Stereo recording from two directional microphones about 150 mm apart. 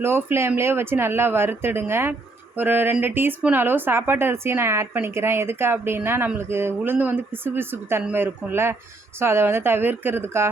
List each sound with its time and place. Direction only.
0.0 s speech: 15° right (ahead or behind)